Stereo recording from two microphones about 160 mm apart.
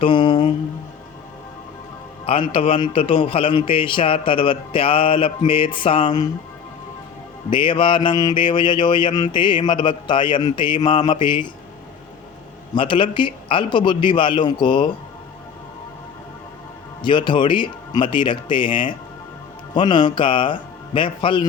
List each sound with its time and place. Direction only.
0.0 s a man's voice: 30° left (ahead or behind)
2.5 s a man's voice: 35° left (ahead or behind)
7.5 s mantra: 30° left (ahead or behind)
12.7 s a man's voice: 30° left (ahead or behind)
17.0 s mantra: 30° left (ahead or behind)
19.7 s a man's voice: 30° left (ahead or behind)